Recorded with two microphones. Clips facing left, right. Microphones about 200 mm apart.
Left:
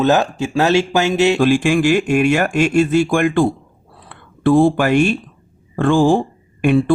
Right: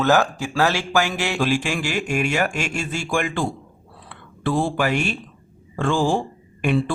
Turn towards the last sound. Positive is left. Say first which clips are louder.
# left 6 dB
turn(degrees=55)  # may be behind; listen again after turning